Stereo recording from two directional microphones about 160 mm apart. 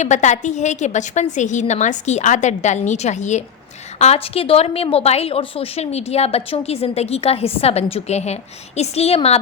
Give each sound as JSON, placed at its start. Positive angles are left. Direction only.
{"t": 0.0, "sound": "a woman's voice", "side_deg": 50}